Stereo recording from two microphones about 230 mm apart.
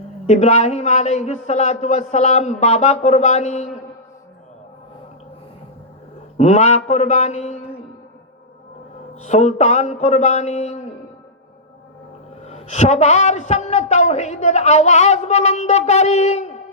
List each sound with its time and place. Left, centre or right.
0.3 s a woman's voice: left
6.3 s a woman's voice: left
9.2 s a woman's voice: left
12.5 s a woman's voice: left